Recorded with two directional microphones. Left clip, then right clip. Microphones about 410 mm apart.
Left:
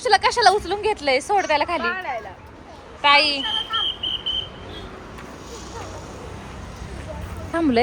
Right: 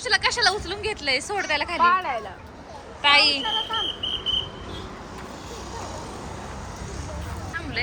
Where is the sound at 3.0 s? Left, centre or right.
Centre.